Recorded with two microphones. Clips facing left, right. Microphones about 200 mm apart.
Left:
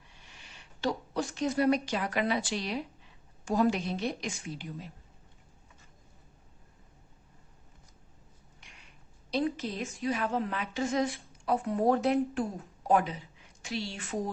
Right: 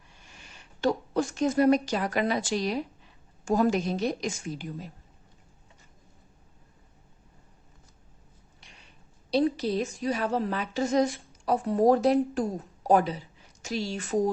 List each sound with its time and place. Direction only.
0.3 s a woman's voice: 50° right (ahead or behind)
8.6 s a sound: 35° right (ahead or behind)
9.3 s a woman's voice: 35° right (ahead or behind)